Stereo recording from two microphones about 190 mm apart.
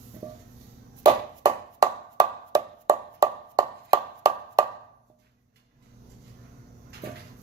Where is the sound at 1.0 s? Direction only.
20° right (ahead or behind).